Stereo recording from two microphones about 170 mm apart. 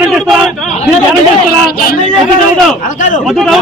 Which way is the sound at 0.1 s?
Centre (ahead or behind).